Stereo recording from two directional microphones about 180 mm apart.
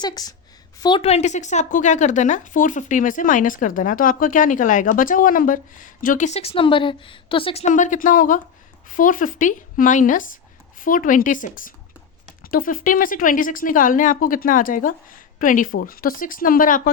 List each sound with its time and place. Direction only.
0.0 s a woman's voice: 20° left (ahead or behind)
7.7 s speech: 45° left (ahead or behind)